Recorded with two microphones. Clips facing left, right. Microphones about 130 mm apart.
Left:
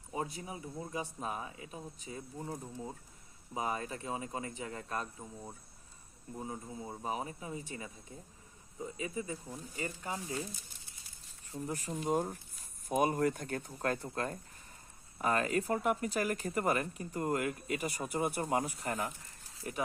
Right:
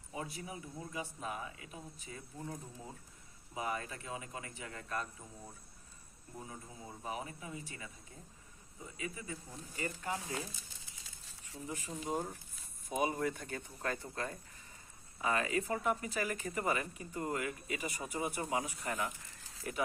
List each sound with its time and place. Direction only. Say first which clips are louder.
0.1 s speech: left 4 dB; 30° left (ahead or behind)
6.4 s speech: left 8 dB; 30° left (ahead or behind)
9.0 s speech: left 3 dB; 25° left (ahead or behind)
11.0 s a sound: right 1 dB; 90° right
11.6 s speech: left 5 dB; 40° left (ahead or behind)